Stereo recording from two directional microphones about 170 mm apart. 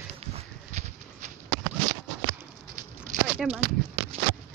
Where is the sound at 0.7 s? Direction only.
40° right (ahead or behind).